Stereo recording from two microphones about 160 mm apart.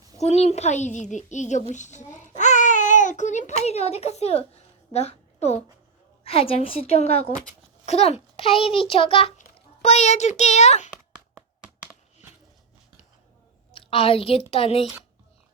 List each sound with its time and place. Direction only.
0.2 s a child's voice: 40° left (ahead or behind)
1.7 s babbling: 50° left (ahead or behind)
6.2 s a child's voice: 35° left (ahead or behind)
11.3 s a sound: 15° right (ahead or behind)
13.7 s a woman's voice: 35° left (ahead or behind)